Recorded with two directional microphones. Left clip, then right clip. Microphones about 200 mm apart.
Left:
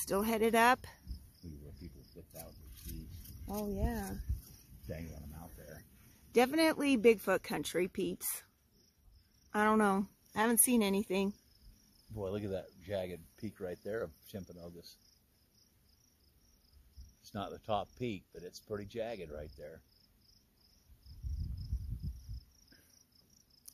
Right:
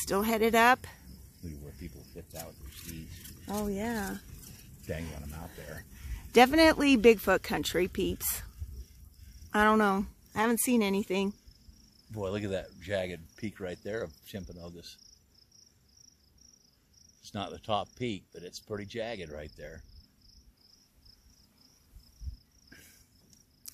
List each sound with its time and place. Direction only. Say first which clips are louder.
0.0 s speech: right 4 dB; centre (ahead or behind)
3.4 s speech: right 5 dB; 20° right (ahead or behind)
4.8 s speech: right 8 dB; 45° right (ahead or behind)
6.3 s speech: right 8 dB; 20° right (ahead or behind)
9.5 s speech: right 5 dB; 5° right (ahead or behind)
12.1 s cricket: right 5 dB; 10° right (ahead or behind)
13.5 s speech: right 3 dB; 10° left (ahead or behind)
17.2 s speech: right 4 dB; 20° left (ahead or behind)